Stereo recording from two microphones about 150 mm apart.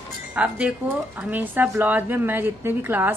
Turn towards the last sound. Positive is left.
turn(degrees=-15)  # may be behind; listen again after turning